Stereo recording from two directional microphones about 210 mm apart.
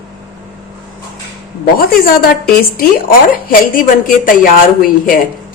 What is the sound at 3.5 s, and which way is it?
A woman's voice, 40° left (ahead or behind).